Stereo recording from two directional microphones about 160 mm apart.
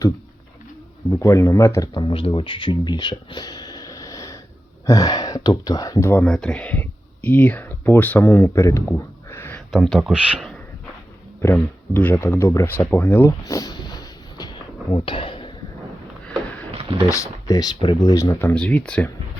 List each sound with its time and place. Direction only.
1.1 s speech: 20° left (ahead or behind)
6.2 s speech: 5° left (ahead or behind)
9.7 s speech: centre (ahead or behind)
11.4 s speech: 10° left (ahead or behind); by 15.5 s 30° left (ahead or behind)
17.1 s speech: 20° left (ahead or behind)